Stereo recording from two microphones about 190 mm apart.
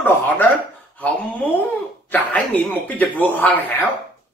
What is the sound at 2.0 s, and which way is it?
Speech, 10° left (ahead or behind).